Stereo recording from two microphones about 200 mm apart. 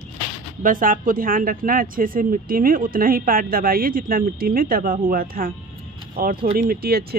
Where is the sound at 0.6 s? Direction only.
45° right (ahead or behind).